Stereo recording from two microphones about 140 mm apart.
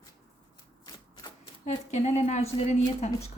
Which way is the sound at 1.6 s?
55° left (ahead or behind).